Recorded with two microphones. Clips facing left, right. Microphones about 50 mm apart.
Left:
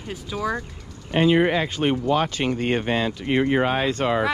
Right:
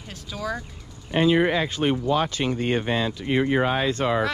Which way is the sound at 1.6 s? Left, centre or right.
Left.